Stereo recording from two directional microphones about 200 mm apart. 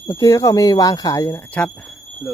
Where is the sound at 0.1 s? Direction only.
15° left (ahead or behind).